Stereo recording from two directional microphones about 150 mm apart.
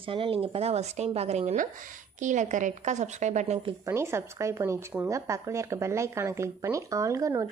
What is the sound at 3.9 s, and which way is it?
Speech, 15° right (ahead or behind).